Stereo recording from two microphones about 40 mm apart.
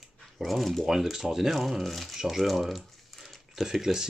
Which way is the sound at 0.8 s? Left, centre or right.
Centre.